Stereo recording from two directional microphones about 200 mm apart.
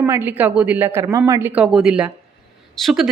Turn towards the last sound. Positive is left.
turn(degrees=0)  # may be behind; listen again after turning